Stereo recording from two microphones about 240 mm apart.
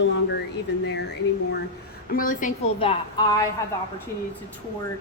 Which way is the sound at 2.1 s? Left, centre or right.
Left.